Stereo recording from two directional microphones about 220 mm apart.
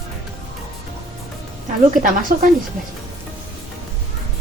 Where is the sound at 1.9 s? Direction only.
35° right (ahead or behind).